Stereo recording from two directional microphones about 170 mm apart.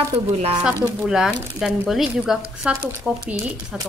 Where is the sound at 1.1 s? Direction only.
Centre (ahead or behind).